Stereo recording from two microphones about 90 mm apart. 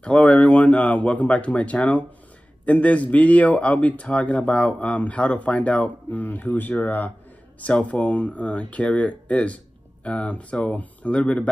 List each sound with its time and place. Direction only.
0.0 s speech: 15° left (ahead or behind)